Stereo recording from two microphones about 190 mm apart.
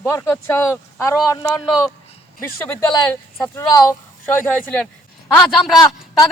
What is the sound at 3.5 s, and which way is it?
Speech, 20° left (ahead or behind).